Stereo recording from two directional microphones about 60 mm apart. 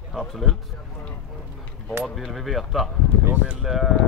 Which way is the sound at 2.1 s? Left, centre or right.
Centre.